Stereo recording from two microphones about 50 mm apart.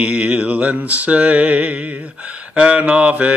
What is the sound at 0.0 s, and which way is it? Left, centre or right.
Mantra, right.